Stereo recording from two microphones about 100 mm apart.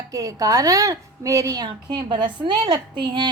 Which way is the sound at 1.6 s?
50° right (ahead or behind).